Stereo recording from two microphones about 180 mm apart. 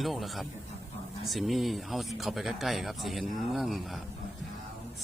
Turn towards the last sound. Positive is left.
turn(degrees=0)  # may be behind; listen again after turning